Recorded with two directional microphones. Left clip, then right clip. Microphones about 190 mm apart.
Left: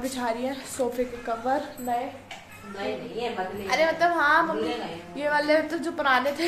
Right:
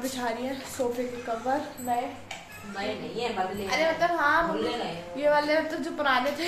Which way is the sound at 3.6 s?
50° left (ahead or behind).